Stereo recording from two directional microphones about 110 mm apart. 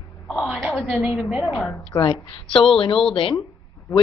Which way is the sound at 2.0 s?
50° left (ahead or behind).